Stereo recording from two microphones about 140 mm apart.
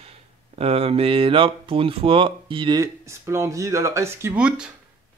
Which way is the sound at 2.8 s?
20° right (ahead or behind).